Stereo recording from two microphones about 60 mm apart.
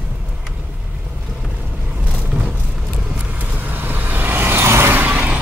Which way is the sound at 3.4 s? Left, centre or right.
Right.